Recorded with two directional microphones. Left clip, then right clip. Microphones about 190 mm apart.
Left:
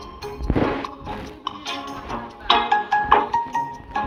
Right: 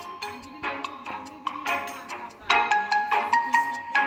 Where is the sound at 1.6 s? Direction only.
35° right (ahead or behind).